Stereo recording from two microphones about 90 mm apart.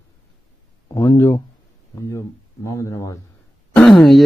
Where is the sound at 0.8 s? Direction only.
40° left (ahead or behind).